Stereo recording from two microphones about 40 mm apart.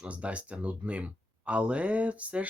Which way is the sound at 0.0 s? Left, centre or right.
Right.